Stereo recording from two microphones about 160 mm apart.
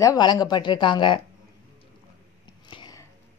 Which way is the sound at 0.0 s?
25° left (ahead or behind).